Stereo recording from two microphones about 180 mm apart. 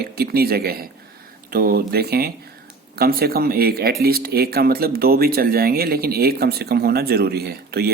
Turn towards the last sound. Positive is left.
turn(degrees=-60)  # may be behind; listen again after turning